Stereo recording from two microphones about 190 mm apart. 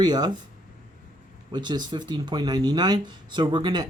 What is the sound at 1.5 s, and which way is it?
Speech, 25° right (ahead or behind).